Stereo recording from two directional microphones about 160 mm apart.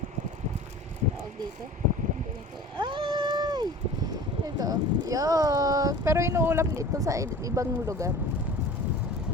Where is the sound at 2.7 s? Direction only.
30° right (ahead or behind).